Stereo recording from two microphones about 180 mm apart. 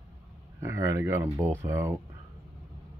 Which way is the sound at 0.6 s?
15° right (ahead or behind).